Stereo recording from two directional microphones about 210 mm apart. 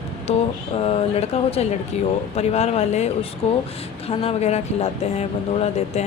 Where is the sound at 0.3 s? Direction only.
30° left (ahead or behind).